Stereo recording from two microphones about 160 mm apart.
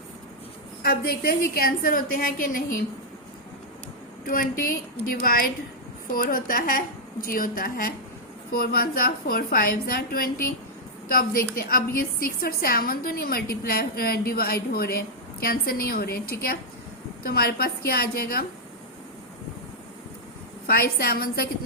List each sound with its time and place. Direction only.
0.8 s a woman's voice: 70° left (ahead or behind)
4.3 s a woman's voice: 60° left (ahead or behind)
20.7 s a woman's voice: 70° left (ahead or behind)